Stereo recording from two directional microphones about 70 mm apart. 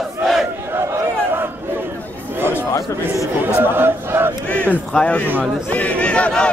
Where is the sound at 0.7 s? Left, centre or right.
Right.